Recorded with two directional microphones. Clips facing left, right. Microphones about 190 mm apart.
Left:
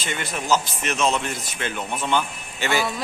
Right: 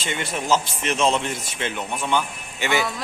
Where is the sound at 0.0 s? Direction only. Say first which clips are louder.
Right 2 dB; 25° right (ahead or behind).